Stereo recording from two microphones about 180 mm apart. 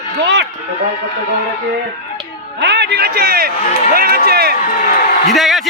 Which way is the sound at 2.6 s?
70° right (ahead or behind).